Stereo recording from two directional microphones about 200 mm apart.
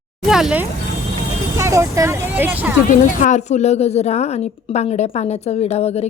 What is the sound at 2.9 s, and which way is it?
A woman's voice, 40° left (ahead or behind).